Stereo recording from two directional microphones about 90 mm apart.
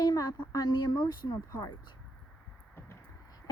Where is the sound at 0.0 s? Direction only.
45° left (ahead or behind).